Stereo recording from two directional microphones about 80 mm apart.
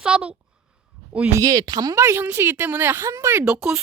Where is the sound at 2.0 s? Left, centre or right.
Right.